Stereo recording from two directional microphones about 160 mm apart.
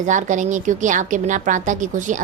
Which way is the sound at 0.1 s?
50° right (ahead or behind).